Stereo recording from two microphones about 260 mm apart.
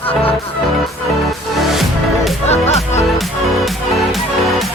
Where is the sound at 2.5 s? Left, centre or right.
Left.